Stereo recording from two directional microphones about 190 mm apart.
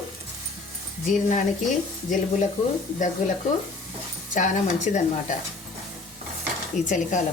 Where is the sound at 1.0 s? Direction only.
40° left (ahead or behind).